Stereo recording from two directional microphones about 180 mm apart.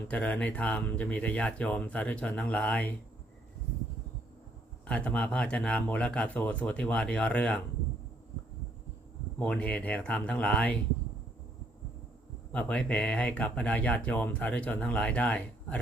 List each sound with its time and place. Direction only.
0.1 s speech: 5° left (ahead or behind)
4.9 s speech: 5° left (ahead or behind)
9.4 s speech: 5° left (ahead or behind)
12.5 s speech: 5° left (ahead or behind)